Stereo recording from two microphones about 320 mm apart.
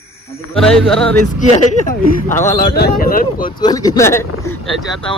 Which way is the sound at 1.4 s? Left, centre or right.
Left.